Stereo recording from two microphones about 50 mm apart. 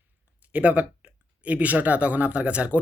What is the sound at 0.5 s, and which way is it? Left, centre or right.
A man's voice, right.